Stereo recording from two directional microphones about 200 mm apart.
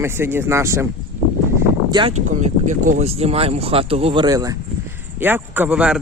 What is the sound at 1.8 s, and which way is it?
Speech, 20° right (ahead or behind).